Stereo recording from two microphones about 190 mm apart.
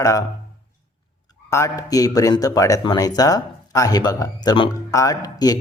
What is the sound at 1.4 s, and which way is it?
Speech, 15° left (ahead or behind).